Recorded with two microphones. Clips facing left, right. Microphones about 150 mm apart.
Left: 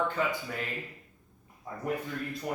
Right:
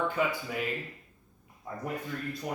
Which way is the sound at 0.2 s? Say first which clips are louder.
Right 3 dB; 10° right (ahead or behind).